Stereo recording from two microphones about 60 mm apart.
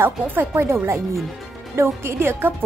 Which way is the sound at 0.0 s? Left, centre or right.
Right.